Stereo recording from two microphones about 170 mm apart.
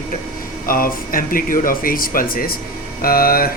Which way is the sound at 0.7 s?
55° left (ahead or behind).